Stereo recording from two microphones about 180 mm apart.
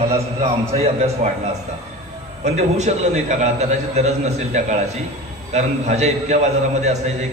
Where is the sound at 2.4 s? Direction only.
40° right (ahead or behind).